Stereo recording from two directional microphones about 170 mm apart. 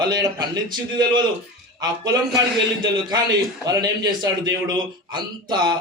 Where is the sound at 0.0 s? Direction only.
25° right (ahead or behind).